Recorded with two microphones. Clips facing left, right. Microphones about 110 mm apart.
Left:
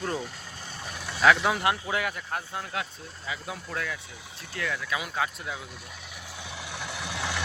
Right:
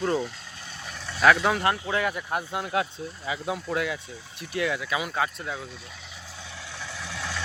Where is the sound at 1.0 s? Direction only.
5° left (ahead or behind).